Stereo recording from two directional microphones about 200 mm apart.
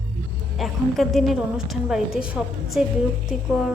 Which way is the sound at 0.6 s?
Centre (ahead or behind).